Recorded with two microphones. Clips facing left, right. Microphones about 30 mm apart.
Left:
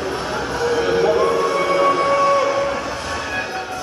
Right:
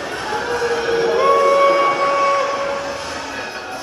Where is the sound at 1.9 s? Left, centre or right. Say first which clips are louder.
Even; centre.